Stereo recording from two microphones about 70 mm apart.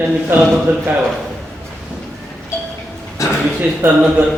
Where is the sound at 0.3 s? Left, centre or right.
Right.